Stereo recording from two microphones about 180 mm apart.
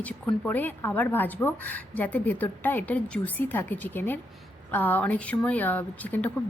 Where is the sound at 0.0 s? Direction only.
10° left (ahead or behind).